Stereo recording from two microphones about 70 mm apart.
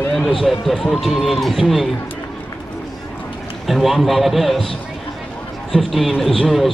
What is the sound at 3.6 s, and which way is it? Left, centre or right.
A man's voice, centre.